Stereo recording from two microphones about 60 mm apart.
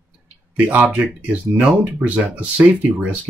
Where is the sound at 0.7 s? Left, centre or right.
Right.